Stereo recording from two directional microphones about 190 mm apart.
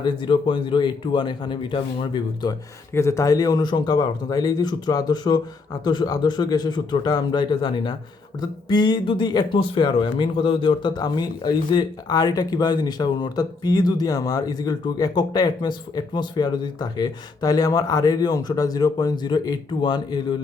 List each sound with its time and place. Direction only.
0.0 s speech: 25° left (ahead or behind)